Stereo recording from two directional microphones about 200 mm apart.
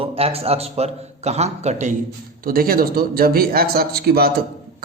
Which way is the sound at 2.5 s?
45° right (ahead or behind).